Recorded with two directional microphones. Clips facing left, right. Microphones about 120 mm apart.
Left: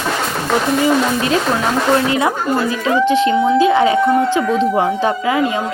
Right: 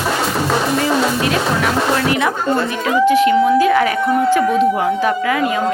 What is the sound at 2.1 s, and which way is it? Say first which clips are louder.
Speech: left 1 dB; 25° left (ahead or behind).